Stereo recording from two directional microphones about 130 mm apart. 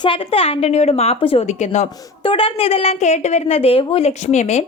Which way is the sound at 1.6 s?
60° left (ahead or behind).